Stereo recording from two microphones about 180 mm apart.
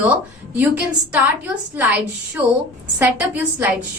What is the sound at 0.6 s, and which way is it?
A woman's voice, 5° right (ahead or behind).